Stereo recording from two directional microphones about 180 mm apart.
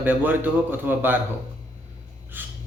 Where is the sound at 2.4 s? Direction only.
10° right (ahead or behind).